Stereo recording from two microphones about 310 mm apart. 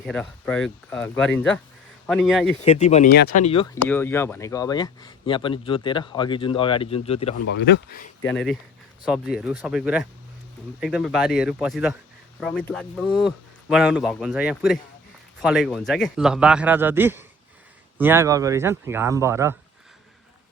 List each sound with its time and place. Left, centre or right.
0.0 s speech: centre
2.6 s speech: centre
3.8 s speech: centre
7.4 s speech: left
8.2 s speech: centre